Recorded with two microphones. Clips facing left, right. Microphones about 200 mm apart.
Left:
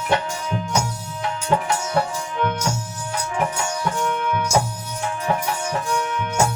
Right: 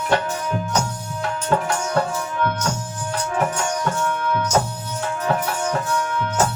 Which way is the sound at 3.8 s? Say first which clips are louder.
Even; 15° left (ahead or behind).